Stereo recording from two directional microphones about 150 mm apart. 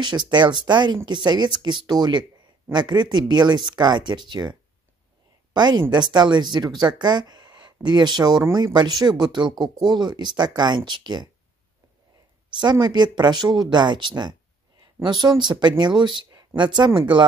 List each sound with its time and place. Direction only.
0.0 s speech: 30° right (ahead or behind)
12.5 s speech: 30° right (ahead or behind)